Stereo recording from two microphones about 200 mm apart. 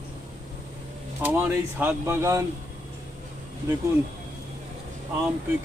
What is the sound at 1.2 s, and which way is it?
Speech, 10° right (ahead or behind).